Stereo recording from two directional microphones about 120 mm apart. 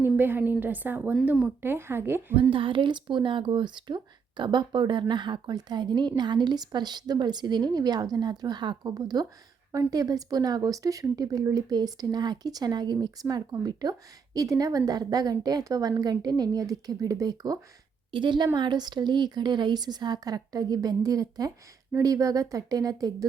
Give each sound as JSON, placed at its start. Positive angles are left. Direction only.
{"t": 0.0, "sound": "a woman's voice", "side_deg": -15}
{"t": 2.5, "sound": "a woman's voice", "side_deg": -45}